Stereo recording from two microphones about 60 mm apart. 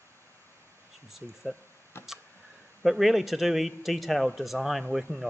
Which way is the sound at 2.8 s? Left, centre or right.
Centre.